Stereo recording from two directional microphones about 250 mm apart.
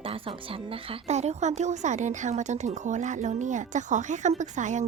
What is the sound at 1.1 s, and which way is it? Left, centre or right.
A woman's voice, right.